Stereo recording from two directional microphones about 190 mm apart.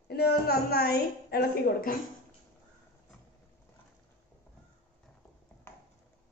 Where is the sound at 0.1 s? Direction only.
55° left (ahead or behind).